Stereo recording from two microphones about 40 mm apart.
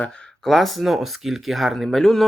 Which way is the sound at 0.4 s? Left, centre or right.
Centre.